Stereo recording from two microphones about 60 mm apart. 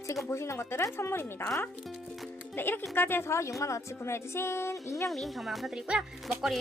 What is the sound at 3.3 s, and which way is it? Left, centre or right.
A woman's voice, left.